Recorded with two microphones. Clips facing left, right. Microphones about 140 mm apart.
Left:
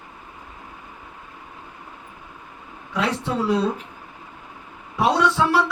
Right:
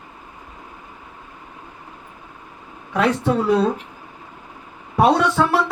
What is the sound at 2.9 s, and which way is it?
Speech, 55° right (ahead or behind).